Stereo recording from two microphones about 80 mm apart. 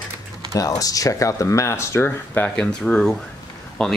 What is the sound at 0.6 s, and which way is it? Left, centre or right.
Speech, left.